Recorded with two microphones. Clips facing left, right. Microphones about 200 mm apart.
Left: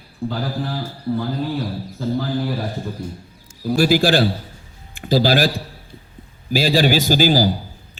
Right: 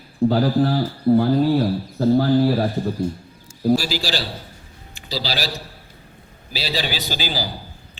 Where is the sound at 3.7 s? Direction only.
55° left (ahead or behind).